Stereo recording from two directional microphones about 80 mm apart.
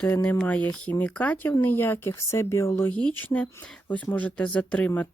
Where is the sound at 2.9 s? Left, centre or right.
Centre.